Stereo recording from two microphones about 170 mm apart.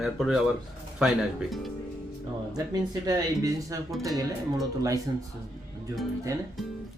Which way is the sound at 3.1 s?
20° right (ahead or behind).